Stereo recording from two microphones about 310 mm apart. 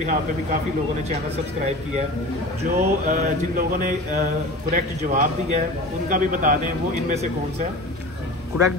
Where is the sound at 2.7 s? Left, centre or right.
Right.